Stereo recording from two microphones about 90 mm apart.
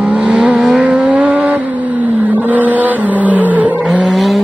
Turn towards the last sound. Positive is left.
turn(degrees=0)  # may be behind; listen again after turning